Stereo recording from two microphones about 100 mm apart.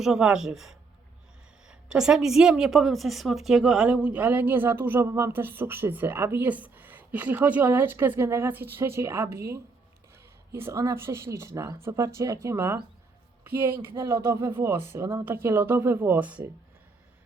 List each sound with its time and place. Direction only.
0.0 s a woman's voice: 5° right (ahead or behind); by 12.8 s 25° right (ahead or behind)
13.9 s speech: 45° right (ahead or behind)
14.2 s a woman's voice: 25° right (ahead or behind)